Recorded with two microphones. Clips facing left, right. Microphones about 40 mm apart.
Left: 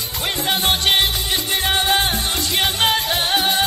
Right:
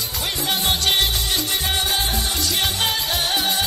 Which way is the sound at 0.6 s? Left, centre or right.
Left.